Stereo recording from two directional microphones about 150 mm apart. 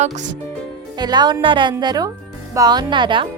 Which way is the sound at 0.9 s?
30° right (ahead or behind).